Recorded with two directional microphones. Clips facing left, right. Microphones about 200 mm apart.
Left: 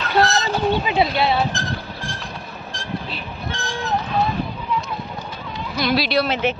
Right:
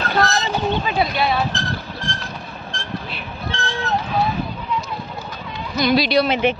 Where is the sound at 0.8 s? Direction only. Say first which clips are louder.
Left 1 dB; 25° left (ahead or behind).